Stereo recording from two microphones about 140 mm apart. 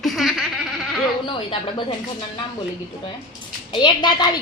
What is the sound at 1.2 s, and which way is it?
Speech, 35° left (ahead or behind).